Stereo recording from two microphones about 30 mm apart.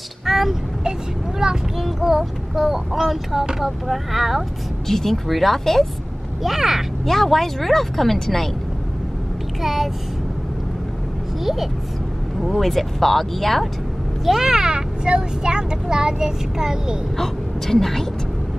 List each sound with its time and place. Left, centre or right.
0.2 s vehicle: centre
1.4 s vehicle: centre
2.6 s speech: centre
4.8 s speech: centre
6.4 s speech: centre
7.1 s speech: centre
9.6 s a child's voice: centre
12.5 s speech: centre
14.4 s speech: centre
17.2 s a woman's voice: centre